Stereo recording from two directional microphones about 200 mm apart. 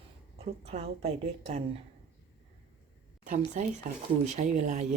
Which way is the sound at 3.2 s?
40° right (ahead or behind).